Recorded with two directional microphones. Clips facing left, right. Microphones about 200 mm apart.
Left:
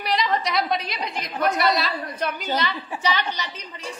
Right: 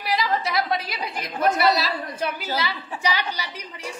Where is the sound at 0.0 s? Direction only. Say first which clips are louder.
Left 1 dB; 5° right (ahead or behind).